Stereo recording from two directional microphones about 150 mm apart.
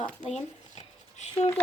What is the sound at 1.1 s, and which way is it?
Speech, 50° left (ahead or behind).